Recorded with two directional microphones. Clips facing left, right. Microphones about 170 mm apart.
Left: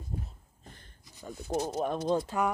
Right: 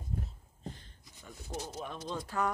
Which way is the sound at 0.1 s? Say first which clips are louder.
Even; 45° left (ahead or behind).